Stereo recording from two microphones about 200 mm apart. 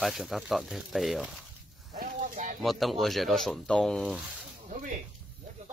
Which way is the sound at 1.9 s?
45° right (ahead or behind).